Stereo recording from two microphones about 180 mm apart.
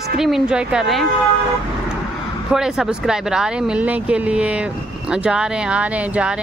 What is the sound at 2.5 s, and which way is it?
Speech, centre (ahead or behind).